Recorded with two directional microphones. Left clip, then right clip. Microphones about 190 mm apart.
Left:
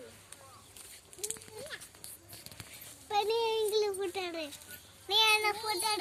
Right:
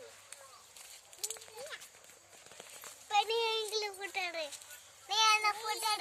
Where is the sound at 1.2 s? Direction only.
Centre (ahead or behind).